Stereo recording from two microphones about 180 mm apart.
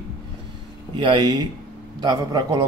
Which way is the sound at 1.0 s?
25° right (ahead or behind).